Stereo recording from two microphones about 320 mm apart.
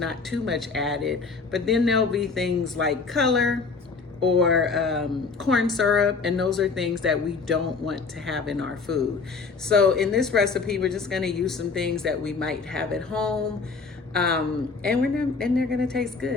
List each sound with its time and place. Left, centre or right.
0.0 s a woman's voice: centre